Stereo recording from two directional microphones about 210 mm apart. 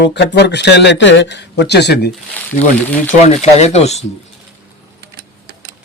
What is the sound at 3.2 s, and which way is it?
Speech, 30° left (ahead or behind).